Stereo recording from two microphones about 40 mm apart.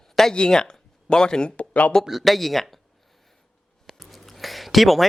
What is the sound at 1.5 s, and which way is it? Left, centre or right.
Speech, left.